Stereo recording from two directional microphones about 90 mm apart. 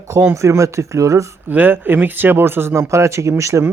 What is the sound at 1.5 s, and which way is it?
Speech, 20° right (ahead or behind).